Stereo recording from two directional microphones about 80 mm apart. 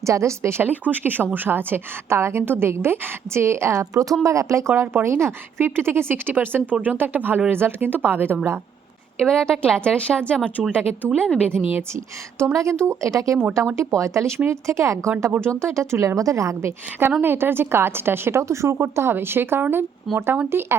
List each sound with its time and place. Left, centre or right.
0.0 s speech: right
3.9 s speech: right
9.1 s a woman's voice: centre
11.5 s speech: right
12.5 s a woman's voice: right